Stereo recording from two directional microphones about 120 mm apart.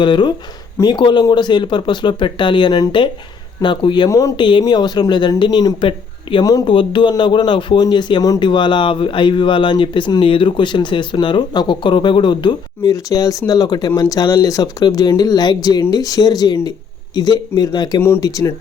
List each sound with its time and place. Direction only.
0.0 s speech: 40° left (ahead or behind)
4.4 s speech: 40° left (ahead or behind)
6.7 s speech: 40° left (ahead or behind)
18.0 s speech: 20° left (ahead or behind)